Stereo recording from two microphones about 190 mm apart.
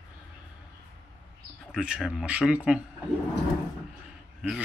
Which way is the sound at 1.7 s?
5° right (ahead or behind).